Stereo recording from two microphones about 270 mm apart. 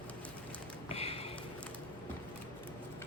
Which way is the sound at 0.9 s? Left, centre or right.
Left.